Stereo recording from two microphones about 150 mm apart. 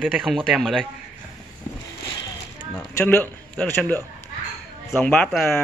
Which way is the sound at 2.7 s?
10° left (ahead or behind).